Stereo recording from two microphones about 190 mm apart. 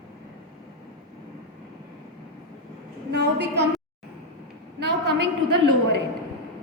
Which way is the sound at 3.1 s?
60° right (ahead or behind).